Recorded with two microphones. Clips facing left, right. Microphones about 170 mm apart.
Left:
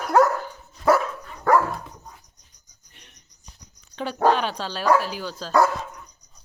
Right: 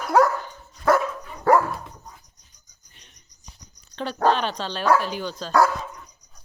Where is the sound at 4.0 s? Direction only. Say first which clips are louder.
Left 1 dB; 10° left (ahead or behind).